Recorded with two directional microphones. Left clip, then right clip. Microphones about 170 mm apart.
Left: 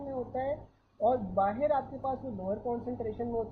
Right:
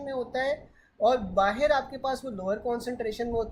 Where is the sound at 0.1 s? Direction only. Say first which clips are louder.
Right 5 dB; 25° right (ahead or behind).